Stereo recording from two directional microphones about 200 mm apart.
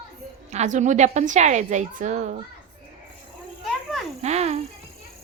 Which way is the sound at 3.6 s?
Centre (ahead or behind).